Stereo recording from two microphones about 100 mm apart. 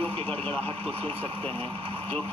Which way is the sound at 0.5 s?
15° left (ahead or behind).